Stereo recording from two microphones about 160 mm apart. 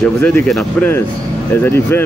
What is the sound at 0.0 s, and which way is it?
Speech, 5° left (ahead or behind).